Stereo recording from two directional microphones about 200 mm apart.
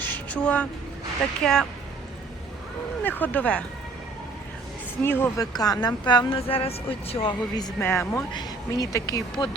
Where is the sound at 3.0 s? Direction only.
10° left (ahead or behind).